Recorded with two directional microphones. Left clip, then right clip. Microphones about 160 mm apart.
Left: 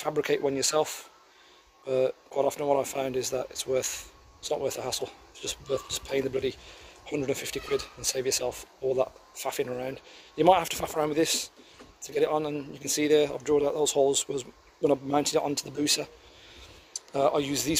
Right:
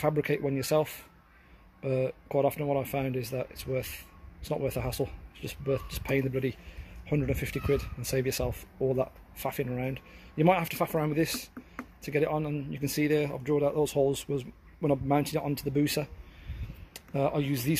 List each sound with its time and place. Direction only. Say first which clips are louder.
0.0 s speech: left 2 dB; 10° left (ahead or behind)
17.1 s speech: left 4 dB; 15° left (ahead or behind)